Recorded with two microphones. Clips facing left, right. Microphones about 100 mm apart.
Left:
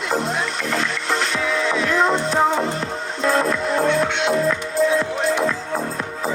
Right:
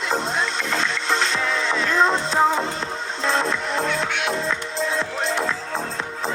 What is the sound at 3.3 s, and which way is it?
Music, 25° right (ahead or behind).